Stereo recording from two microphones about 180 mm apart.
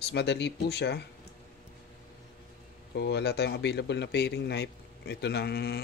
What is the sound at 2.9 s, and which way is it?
Speech, 70° left (ahead or behind).